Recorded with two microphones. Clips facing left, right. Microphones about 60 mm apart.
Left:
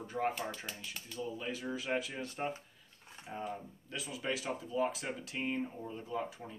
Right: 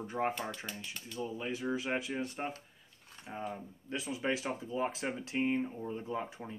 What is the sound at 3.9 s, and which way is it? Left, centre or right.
Speech, right.